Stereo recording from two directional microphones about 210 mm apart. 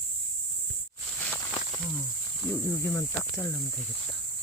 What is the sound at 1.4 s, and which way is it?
Snake, 20° left (ahead or behind).